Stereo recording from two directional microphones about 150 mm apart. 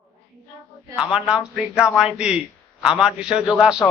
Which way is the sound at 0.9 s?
5° right (ahead or behind).